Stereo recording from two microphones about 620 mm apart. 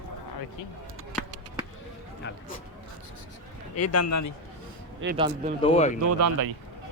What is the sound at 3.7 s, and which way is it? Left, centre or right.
Speech, left.